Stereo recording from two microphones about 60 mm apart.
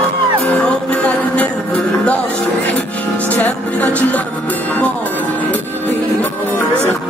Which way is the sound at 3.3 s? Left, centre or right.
Left.